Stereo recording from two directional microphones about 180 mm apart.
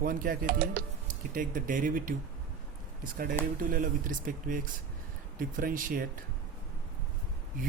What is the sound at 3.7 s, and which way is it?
Speech, 50° right (ahead or behind).